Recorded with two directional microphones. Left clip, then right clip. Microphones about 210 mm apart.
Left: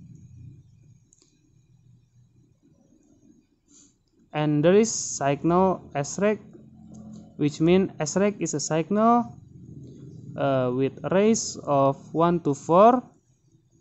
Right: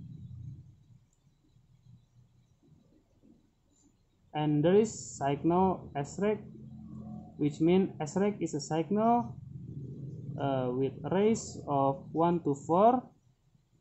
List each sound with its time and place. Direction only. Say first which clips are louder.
4.3 s speech: left 7 dB; 45° left (ahead or behind)
7.3 s speech: left 6 dB; 45° left (ahead or behind)
10.3 s speech: left 8 dB; 45° left (ahead or behind)